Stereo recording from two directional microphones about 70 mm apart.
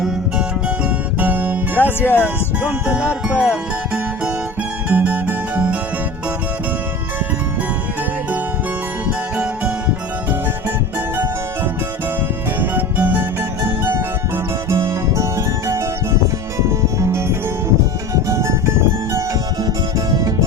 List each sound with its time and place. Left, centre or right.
1.2 s music: right
1.8 s speech: left
2.6 s music: right
9.0 s music: centre
12.5 s music: right
14.7 s music: right
19.6 s music: right